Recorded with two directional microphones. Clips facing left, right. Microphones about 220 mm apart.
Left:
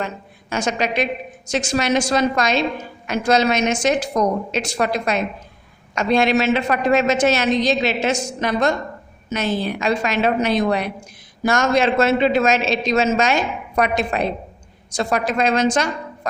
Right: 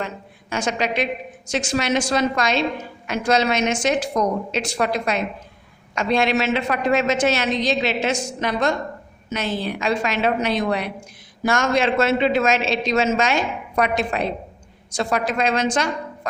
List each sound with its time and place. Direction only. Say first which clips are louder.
0.5 s a woman's voice: left 2 dB; 45° left (ahead or behind)